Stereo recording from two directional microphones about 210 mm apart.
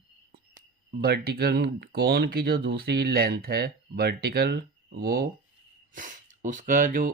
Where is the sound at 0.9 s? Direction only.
50° right (ahead or behind).